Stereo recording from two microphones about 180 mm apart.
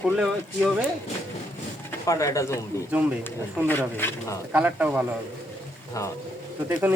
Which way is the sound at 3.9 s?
10° left (ahead or behind).